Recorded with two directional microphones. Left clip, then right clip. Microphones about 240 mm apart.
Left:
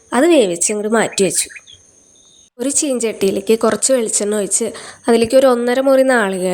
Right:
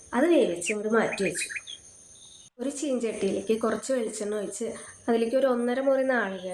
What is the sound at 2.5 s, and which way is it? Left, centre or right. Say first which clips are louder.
A woman's voice: left 11 dB; left.